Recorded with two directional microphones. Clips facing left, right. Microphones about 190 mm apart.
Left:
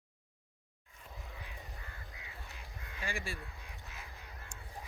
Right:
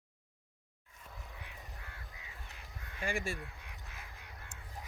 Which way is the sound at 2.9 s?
45° right (ahead or behind).